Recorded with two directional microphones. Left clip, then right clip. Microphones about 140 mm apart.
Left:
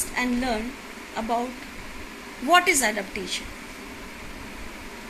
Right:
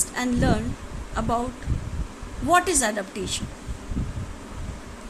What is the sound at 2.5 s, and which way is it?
Speech, 40° right (ahead or behind).